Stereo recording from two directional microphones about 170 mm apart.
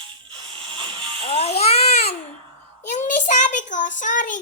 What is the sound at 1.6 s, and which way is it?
Baby cry, 40° left (ahead or behind).